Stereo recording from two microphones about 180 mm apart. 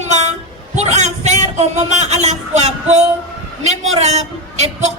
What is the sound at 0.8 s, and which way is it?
A woman's voice, 40° right (ahead or behind).